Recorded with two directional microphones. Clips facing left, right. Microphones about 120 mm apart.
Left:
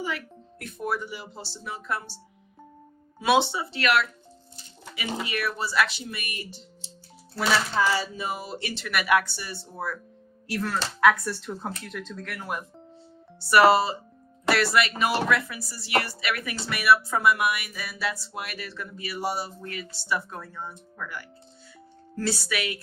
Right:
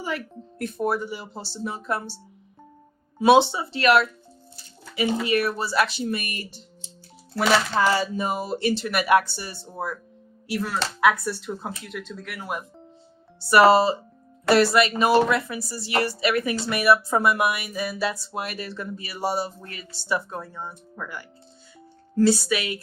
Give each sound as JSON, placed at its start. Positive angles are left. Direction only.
{"t": 0.6, "sound": "speech", "side_deg": -35}
{"t": 3.2, "sound": "speech", "side_deg": -30}
{"t": 5.3, "sound": "speech", "side_deg": -40}
{"t": 7.3, "sound": "speech", "side_deg": -55}
{"t": 9.7, "sound": "speech", "side_deg": -20}
{"t": 13.5, "sound": "speech", "side_deg": -25}